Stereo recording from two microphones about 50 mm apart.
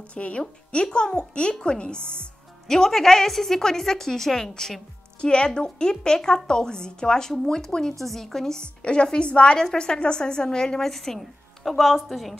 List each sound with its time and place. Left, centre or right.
0.1 s speech: left
2.7 s a woman's voice: centre